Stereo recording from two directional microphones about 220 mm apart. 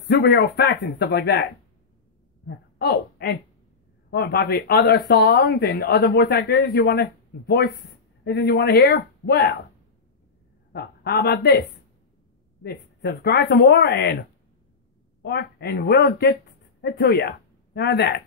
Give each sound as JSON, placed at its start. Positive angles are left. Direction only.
{"t": 0.0, "sound": "speech", "side_deg": 50}
{"t": 10.7, "sound": "speech", "side_deg": 45}
{"t": 12.6, "sound": "speech", "side_deg": 45}
{"t": 15.2, "sound": "speech", "side_deg": 50}